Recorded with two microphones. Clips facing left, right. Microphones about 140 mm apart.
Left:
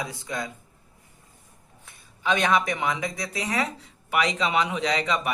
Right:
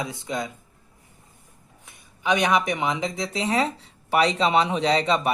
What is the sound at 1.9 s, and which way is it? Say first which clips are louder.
Speech: right 2 dB; 15° right (ahead or behind).